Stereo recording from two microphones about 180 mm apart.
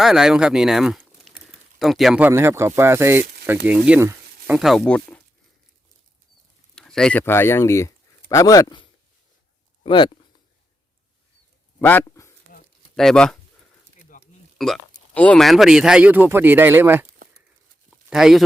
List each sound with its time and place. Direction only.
0.0 s speech: 5° right (ahead or behind)
6.7 s speech: 5° left (ahead or behind); by 10.1 s 25° left (ahead or behind)
11.8 s a sound: 10° left (ahead or behind)
12.5 s a sound: 55° left (ahead or behind)
13.0 s speech: 5° left (ahead or behind)
14.6 s speech: 5° left (ahead or behind); by 17.2 s 15° right (ahead or behind)
18.1 s speech: centre (ahead or behind)